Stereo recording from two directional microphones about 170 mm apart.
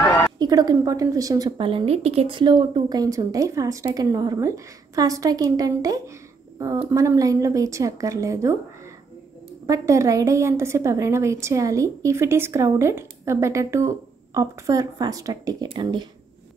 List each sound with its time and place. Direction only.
0.0 s a sound: 20° left (ahead or behind)
0.4 s a woman's voice: 20° right (ahead or behind)
9.7 s a woman's voice: 20° right (ahead or behind)